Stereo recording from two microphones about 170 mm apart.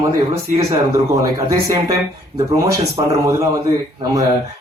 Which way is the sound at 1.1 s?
20° right (ahead or behind).